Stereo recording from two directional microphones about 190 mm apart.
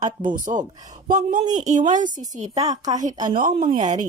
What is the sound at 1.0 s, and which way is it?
A woman's voice, 45° right (ahead or behind).